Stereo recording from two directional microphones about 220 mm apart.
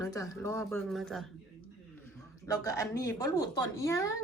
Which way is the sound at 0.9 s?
Centre (ahead or behind).